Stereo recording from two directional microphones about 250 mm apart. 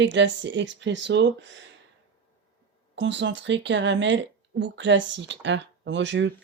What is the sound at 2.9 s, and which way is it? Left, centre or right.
Speech, right.